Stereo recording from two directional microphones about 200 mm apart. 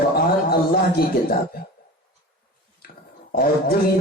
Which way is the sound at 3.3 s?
45° left (ahead or behind).